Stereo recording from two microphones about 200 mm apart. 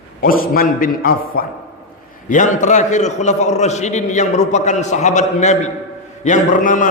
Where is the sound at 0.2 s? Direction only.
45° left (ahead or behind).